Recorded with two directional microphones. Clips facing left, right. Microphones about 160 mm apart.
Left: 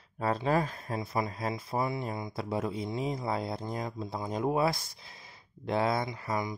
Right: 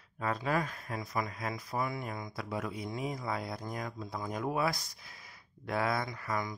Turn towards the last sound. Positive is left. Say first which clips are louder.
# left 3 dB
turn(degrees=20)  # may be behind; listen again after turning